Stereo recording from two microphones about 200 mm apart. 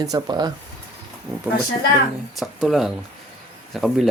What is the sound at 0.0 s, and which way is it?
Speech, 20° right (ahead or behind).